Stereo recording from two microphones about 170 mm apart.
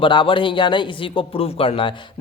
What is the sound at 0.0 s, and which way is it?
Speech, 30° left (ahead or behind).